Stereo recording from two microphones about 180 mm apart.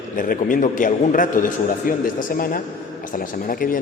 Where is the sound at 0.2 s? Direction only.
50° left (ahead or behind).